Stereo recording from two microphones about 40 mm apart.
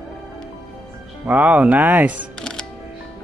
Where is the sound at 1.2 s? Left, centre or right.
Right.